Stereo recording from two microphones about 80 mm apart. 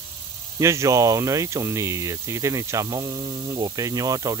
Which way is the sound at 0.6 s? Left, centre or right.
Right.